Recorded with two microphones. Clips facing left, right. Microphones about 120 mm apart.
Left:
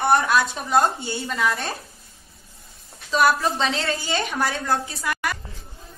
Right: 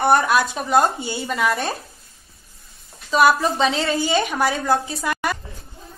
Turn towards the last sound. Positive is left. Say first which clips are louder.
# right 3 dB
turn(degrees=-25)  # may be behind; listen again after turning